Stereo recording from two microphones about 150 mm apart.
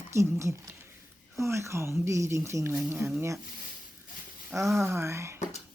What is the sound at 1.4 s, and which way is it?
Speech, 20° right (ahead or behind).